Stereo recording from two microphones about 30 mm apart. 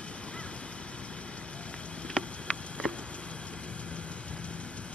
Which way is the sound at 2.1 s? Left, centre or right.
Left.